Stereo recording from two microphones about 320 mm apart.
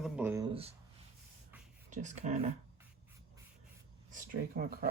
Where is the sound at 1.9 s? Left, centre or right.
Right.